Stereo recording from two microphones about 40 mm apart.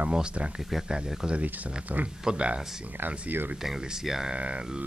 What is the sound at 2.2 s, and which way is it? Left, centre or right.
Speech, right.